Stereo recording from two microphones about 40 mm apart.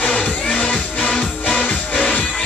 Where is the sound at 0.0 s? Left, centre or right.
Left.